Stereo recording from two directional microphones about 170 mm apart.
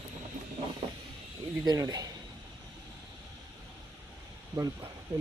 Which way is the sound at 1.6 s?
20° right (ahead or behind).